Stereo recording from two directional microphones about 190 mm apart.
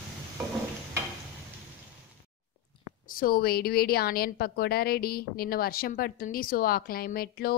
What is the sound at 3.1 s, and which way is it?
A woman's voice, 50° left (ahead or behind).